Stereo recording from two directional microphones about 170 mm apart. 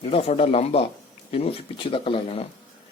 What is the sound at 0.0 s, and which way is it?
Speech, 35° left (ahead or behind).